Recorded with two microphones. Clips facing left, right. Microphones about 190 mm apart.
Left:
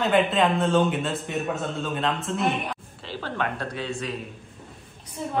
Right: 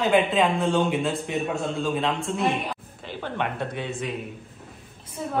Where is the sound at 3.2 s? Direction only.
20° right (ahead or behind).